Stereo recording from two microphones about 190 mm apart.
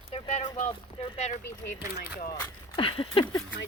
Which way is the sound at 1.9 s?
55° left (ahead or behind).